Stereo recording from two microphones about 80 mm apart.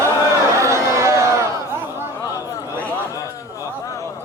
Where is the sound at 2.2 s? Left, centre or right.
Left.